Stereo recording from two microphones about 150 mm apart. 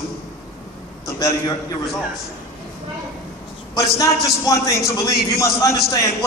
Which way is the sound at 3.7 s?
20° left (ahead or behind).